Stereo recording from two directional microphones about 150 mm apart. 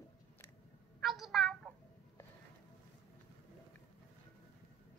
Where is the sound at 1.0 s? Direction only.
Centre (ahead or behind).